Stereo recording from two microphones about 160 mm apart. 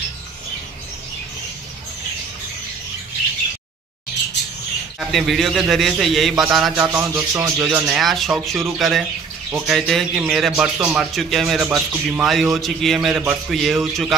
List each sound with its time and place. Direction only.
5.1 s speech: centre (ahead or behind)
6.9 s speech: 15° right (ahead or behind)
7.5 s speech: 5° right (ahead or behind)